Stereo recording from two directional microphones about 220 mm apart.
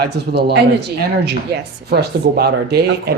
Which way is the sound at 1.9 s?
45° right (ahead or behind).